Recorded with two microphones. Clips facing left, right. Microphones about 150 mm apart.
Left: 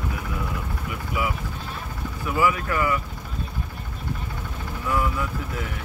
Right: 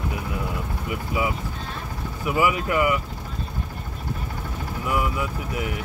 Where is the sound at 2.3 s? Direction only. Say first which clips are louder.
Right 1 dB; 15° right (ahead or behind).